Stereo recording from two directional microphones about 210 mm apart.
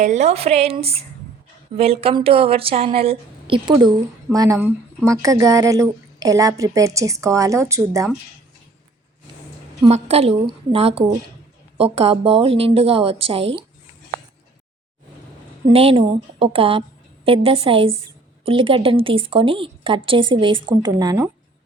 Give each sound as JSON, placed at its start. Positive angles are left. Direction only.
{"t": 0.0, "sound": "speech", "side_deg": -35}
{"t": 9.9, "sound": "speech", "side_deg": -30}
{"t": 15.7, "sound": "speech", "side_deg": -25}